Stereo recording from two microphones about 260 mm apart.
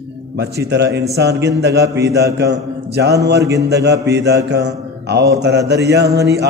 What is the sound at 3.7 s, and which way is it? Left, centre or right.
Mantra, right.